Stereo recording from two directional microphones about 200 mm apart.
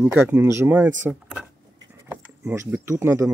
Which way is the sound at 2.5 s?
10° right (ahead or behind).